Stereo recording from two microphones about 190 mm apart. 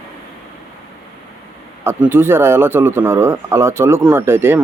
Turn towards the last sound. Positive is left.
turn(degrees=-10)  # may be behind; listen again after turning